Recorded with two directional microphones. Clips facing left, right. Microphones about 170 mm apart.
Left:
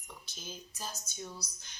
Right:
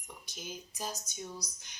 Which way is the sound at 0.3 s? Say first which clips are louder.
Right 4 dB; 15° right (ahead or behind).